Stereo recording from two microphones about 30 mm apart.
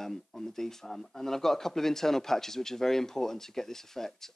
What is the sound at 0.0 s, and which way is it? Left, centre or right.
Speech, centre.